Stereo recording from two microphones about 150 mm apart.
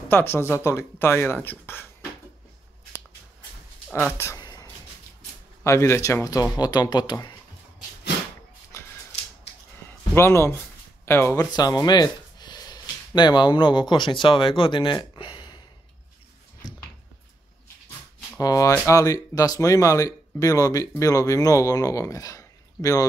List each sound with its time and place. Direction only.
0.1 s speech: 15° left (ahead or behind)
4.1 s speech: 15° left (ahead or behind)
4.4 s chopping: 30° left (ahead or behind)
5.6 s speech: 20° left (ahead or behind)
8.7 s a sound: 20° left (ahead or behind)
11.1 s speech: 20° left (ahead or behind); by 15.4 s 35° left (ahead or behind)
18.4 s speech: 25° left (ahead or behind)